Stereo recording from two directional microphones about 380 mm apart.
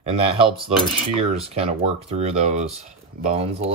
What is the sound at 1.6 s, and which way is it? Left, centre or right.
Speech, centre.